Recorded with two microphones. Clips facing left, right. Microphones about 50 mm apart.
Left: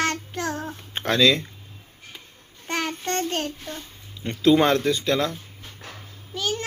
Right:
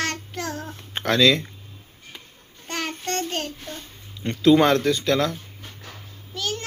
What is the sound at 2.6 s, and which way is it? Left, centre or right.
Child singing, centre.